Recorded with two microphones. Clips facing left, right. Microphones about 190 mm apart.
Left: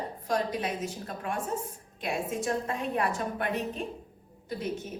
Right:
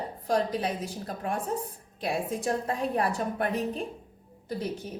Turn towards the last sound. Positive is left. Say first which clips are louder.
# right 2 dB
turn(degrees=-35)  # may be behind; listen again after turning